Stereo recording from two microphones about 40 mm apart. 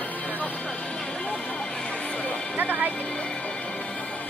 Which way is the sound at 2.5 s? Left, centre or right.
Right.